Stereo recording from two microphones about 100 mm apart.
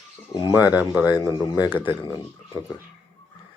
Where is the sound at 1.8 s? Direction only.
55° left (ahead or behind).